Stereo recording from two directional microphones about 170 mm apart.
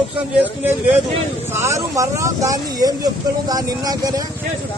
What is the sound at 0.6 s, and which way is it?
Speech, 10° right (ahead or behind).